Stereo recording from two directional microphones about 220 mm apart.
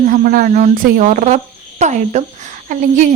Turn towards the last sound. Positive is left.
turn(degrees=-35)  # may be behind; listen again after turning